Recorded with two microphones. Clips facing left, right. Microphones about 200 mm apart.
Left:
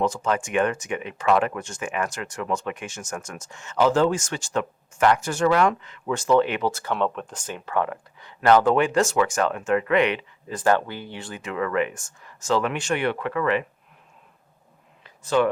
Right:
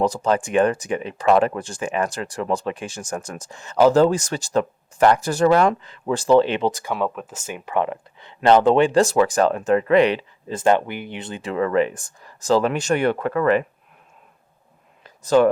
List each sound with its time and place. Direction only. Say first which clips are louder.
0.0 s speech: right 4 dB; 35° right (ahead or behind)
6.7 s speech: right 3 dB; 15° right (ahead or behind)
6.9 s speech: right 1 dB; 5° right (ahead or behind); by 13.7 s 45° right (ahead or behind)
15.0 s a sound: right 5 dB; 40° right (ahead or behind)